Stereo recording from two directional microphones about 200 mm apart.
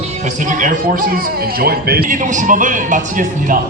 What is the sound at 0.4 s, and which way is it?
A man's voice, 40° right (ahead or behind).